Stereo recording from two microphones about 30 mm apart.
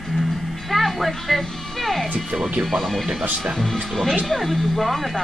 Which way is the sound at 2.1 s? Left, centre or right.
Centre.